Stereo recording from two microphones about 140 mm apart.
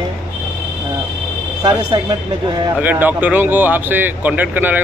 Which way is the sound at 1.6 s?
30° right (ahead or behind).